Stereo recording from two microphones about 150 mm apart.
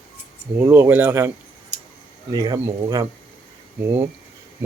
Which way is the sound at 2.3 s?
25° right (ahead or behind).